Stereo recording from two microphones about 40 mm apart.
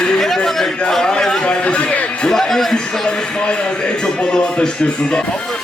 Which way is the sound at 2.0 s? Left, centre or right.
Centre.